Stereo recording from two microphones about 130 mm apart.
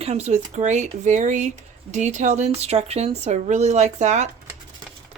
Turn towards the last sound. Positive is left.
turn(degrees=-60)  # may be behind; listen again after turning